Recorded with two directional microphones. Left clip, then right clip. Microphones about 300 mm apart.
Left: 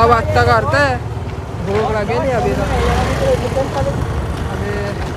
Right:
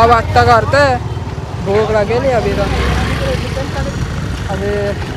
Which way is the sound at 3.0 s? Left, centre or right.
Left.